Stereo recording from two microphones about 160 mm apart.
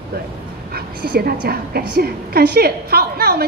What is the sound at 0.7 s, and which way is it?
A woman's voice, 70° right (ahead or behind).